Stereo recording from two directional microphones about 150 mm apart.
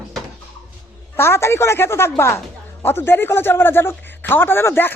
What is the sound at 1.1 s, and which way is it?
A man's voice, 15° left (ahead or behind).